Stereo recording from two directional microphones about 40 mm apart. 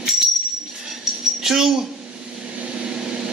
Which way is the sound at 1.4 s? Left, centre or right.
Centre.